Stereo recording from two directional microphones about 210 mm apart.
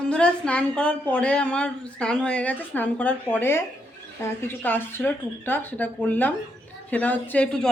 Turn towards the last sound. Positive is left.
turn(degrees=5)  # may be behind; listen again after turning